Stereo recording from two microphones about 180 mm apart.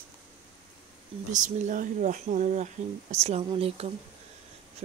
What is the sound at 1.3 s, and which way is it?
Speech, 45° right (ahead or behind).